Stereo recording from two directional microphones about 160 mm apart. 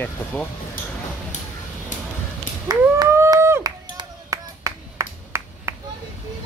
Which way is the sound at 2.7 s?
25° right (ahead or behind).